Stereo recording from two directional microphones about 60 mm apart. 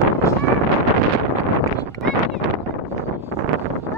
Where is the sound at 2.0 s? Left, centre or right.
Centre.